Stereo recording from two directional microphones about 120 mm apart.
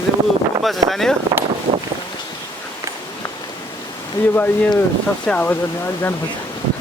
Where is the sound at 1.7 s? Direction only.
65° right (ahead or behind).